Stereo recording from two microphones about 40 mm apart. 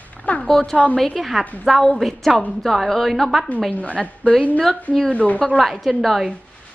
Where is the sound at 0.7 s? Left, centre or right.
Left.